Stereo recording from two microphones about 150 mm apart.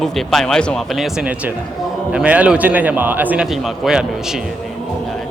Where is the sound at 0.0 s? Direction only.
Centre (ahead or behind).